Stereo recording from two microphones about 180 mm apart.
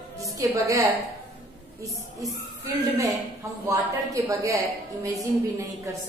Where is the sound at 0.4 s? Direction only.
20° right (ahead or behind).